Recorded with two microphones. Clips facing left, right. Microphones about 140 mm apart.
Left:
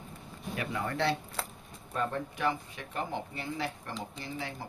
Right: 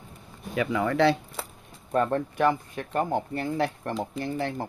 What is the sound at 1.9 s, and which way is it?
Speech, 55° right (ahead or behind).